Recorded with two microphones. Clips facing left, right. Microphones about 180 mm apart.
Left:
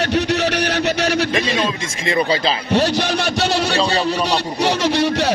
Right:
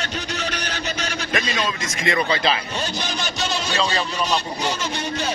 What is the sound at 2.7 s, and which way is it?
A man's voice, 65° left (ahead or behind).